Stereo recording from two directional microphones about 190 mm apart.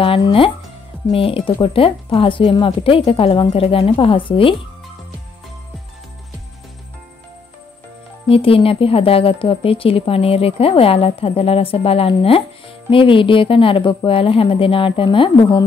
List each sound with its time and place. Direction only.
0.0 s a woman's voice: 30° left (ahead or behind)
8.3 s a woman's voice: 30° left (ahead or behind)